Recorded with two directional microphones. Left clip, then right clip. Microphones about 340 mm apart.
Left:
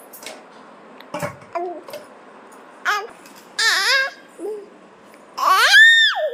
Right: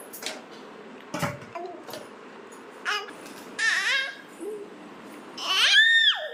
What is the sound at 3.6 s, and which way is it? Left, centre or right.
Baby cry, centre.